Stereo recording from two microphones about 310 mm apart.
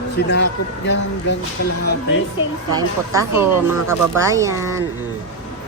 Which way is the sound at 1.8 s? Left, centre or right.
Left.